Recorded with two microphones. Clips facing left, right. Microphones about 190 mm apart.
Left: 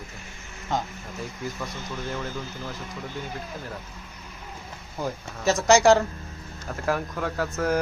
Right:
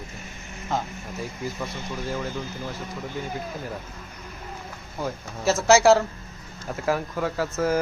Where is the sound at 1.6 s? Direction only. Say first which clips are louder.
Right 2 dB; 5° right (ahead or behind).